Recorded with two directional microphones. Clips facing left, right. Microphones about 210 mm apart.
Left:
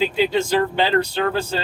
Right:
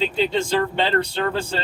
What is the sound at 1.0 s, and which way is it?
Speech, 30° right (ahead or behind).